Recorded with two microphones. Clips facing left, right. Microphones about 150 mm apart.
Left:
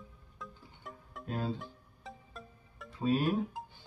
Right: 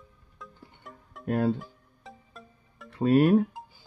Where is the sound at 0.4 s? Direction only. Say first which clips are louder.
Right 1 dB; centre (ahead or behind).